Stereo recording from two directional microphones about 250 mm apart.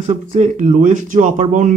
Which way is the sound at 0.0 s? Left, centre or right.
Right.